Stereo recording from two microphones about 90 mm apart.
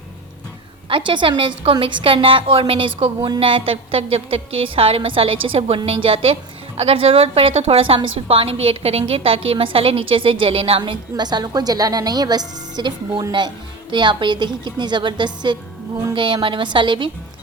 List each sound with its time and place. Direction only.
0.9 s a woman's voice: 65° right (ahead or behind); by 2.9 s 80° right
3.2 s a woman's voice: 50° right (ahead or behind)
3.4 s a woman's voice: 80° right
11.2 s a woman's voice: 50° right (ahead or behind)